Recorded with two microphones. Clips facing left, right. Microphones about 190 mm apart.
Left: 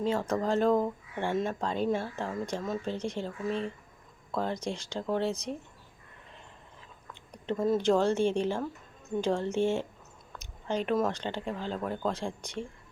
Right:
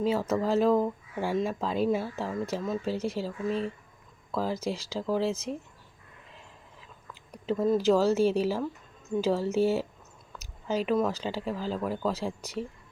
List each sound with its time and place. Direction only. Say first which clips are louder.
0.0 s speech: right 2 dB; 5° right (ahead or behind)
7.1 s speech: right 3 dB; 5° right (ahead or behind)